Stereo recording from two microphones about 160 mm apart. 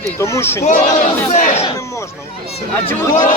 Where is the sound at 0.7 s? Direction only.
50° left (ahead or behind).